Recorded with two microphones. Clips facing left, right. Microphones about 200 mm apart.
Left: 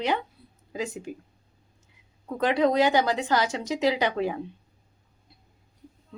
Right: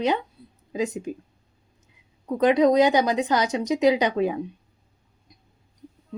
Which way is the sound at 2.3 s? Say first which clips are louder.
Right 5 dB; 20° right (ahead or behind).